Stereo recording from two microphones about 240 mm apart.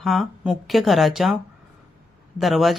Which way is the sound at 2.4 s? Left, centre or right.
Centre.